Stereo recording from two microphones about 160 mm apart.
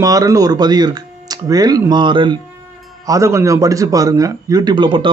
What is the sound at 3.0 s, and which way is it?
Speech, 20° right (ahead or behind).